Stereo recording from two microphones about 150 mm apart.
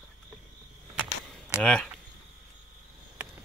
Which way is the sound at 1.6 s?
5° left (ahead or behind).